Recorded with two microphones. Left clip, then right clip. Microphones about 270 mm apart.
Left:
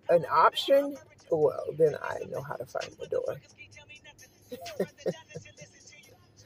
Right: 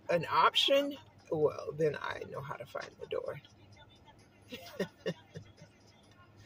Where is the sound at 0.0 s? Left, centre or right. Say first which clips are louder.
Left 6 dB; centre.